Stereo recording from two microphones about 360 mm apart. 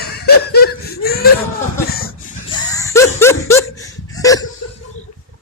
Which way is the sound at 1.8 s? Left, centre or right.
Left.